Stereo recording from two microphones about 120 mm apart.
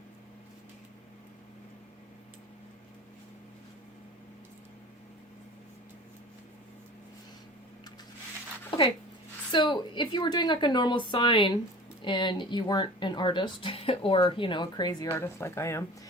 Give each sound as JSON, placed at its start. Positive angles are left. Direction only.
{"t": 9.5, "sound": "a woman's voice", "side_deg": 40}
{"t": 15.1, "sound": "a woman's voice", "side_deg": 20}